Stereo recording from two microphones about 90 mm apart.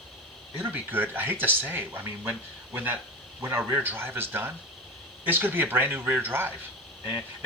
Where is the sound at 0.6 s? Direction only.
20° right (ahead or behind).